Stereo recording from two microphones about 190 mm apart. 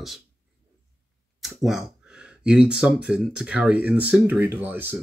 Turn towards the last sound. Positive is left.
turn(degrees=-10)  # may be behind; listen again after turning